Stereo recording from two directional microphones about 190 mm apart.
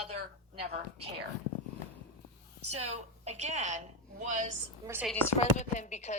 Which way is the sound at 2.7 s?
35° right (ahead or behind).